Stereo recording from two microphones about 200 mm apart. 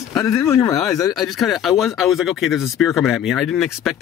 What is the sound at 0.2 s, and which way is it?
Speech, 15° left (ahead or behind).